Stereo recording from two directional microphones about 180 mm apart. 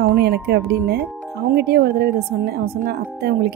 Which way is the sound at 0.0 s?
60° right (ahead or behind).